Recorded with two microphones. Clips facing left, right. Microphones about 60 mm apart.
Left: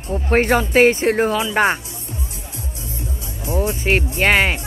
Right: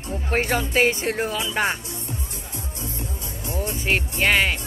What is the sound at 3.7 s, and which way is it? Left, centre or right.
Speech, left.